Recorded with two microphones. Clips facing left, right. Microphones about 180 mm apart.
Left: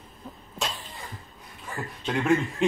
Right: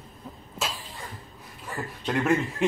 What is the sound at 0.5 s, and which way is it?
Cough, centre (ahead or behind).